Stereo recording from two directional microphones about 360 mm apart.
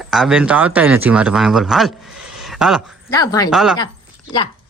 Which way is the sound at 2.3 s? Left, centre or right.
Centre.